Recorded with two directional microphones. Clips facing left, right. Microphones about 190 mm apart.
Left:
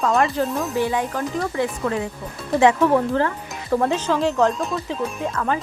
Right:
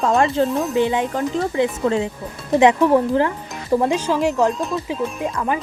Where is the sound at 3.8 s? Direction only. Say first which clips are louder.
Even; 10° right (ahead or behind).